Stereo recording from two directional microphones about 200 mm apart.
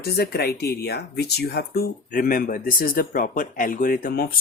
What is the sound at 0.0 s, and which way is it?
Speech, 55° left (ahead or behind).